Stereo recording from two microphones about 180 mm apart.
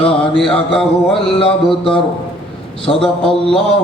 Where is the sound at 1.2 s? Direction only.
30° left (ahead or behind).